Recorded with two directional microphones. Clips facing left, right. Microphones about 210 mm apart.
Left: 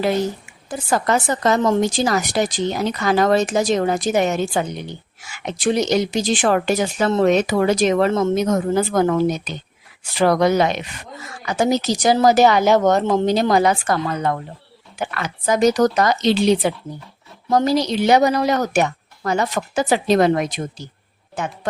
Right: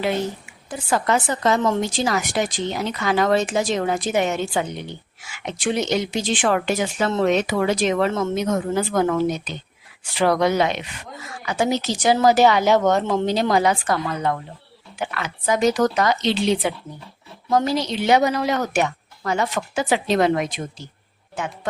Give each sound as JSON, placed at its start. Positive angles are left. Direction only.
{"t": 0.7, "sound": "a woman's voice", "side_deg": 40}